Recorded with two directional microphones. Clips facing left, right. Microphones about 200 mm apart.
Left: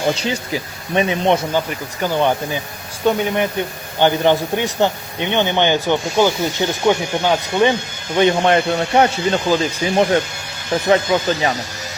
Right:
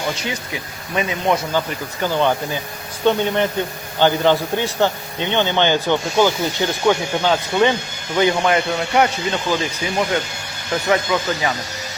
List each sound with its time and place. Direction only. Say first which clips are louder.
0.1 s speech: left 5 dB; 30° left (ahead or behind)
1.5 s a man's voice: left 1 dB; 15° left (ahead or behind)
8.4 s speech: left 3 dB; 35° left (ahead or behind)